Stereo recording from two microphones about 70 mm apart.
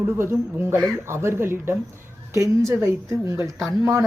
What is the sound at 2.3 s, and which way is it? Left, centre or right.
A woman's voice, right.